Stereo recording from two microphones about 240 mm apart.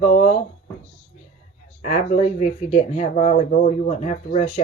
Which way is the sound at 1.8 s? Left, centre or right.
Left.